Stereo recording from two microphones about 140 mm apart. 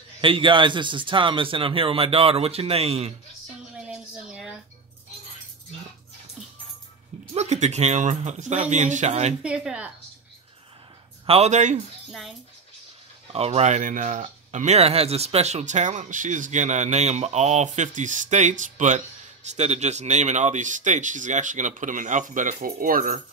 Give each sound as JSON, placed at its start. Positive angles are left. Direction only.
{"t": 0.2, "sound": "a man's voice", "side_deg": -40}
{"t": 3.7, "sound": "a sound", "side_deg": -5}
{"t": 7.3, "sound": "speech", "side_deg": -55}
{"t": 9.4, "sound": "a woman's voice", "side_deg": -5}
{"t": 11.2, "sound": "speech", "side_deg": -50}
{"t": 12.1, "sound": "speech", "side_deg": 0}
{"t": 13.3, "sound": "speech", "side_deg": -50}